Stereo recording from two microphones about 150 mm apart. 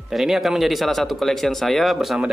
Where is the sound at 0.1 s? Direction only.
Centre (ahead or behind).